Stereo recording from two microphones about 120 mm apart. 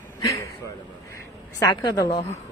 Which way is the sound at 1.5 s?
30° left (ahead or behind).